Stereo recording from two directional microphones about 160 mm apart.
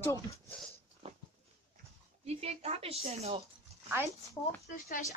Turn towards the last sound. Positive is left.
turn(degrees=65)  # may be behind; listen again after turning